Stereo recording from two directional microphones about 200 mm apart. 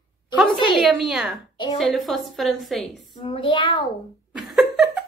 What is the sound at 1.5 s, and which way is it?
Speech, 20° left (ahead or behind).